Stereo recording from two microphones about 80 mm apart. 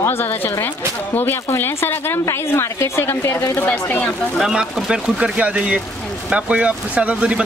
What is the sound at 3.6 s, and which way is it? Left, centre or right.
Speech, left.